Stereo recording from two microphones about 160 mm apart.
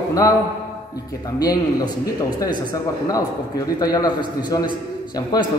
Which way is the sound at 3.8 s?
25° left (ahead or behind).